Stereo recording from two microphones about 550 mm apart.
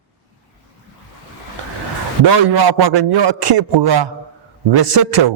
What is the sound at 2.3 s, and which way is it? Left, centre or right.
A man's voice, right.